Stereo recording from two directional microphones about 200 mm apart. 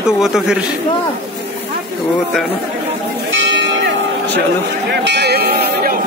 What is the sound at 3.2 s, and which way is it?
Church bell, 65° right (ahead or behind).